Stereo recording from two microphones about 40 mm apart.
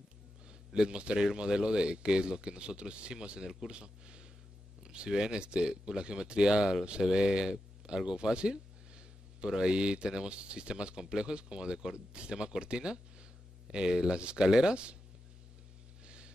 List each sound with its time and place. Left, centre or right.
0.5 s speech: right
8.0 s a sound: right
9.5 s speech: centre